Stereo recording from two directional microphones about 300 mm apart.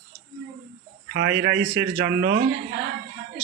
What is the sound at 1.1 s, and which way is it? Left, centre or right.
Speech, right.